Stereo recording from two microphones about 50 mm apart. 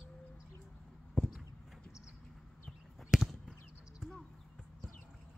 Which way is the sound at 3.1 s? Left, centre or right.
Centre.